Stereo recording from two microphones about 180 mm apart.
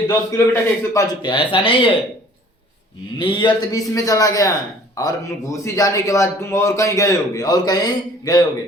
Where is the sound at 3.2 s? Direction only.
25° left (ahead or behind).